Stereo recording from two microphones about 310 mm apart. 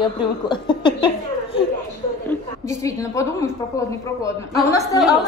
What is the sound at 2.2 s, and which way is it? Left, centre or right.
A woman's voice, centre.